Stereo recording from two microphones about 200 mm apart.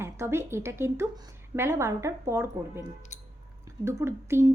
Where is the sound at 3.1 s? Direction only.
35° left (ahead or behind).